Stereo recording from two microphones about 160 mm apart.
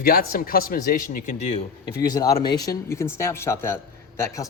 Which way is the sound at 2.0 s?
25° left (ahead or behind).